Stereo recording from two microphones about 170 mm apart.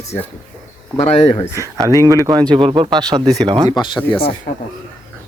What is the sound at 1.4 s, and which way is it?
Speech, 20° left (ahead or behind).